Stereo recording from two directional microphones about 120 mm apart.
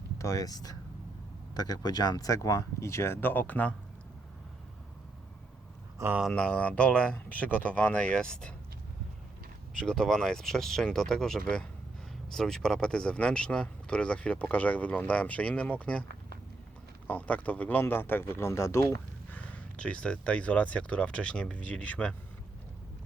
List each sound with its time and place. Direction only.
0.2 s speech: 30° left (ahead or behind)
6.0 s speech: 25° right (ahead or behind)
6.3 s speech: 10° left (ahead or behind)
9.8 s speech: 5° left (ahead or behind)
17.1 s speech: 10° left (ahead or behind)
19.4 s speech: 10° left (ahead or behind)